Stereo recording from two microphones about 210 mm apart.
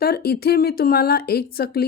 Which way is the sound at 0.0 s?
45° left (ahead or behind).